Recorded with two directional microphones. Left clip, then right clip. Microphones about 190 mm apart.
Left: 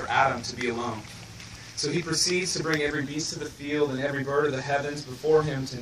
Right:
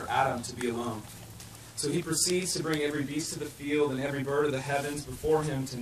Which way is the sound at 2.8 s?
5° right (ahead or behind).